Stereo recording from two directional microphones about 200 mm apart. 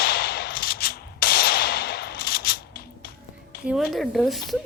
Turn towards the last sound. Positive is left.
turn(degrees=0)  # may be behind; listen again after turning